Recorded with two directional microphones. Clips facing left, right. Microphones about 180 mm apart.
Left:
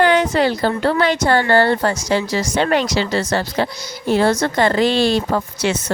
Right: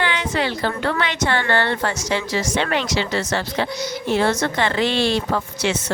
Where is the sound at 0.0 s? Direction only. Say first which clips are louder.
Left 8 dB; 45° left (ahead or behind).